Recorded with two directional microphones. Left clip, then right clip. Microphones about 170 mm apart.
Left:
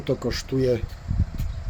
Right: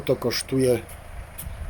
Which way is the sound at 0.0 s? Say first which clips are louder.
Right 3 dB; 5° right (ahead or behind).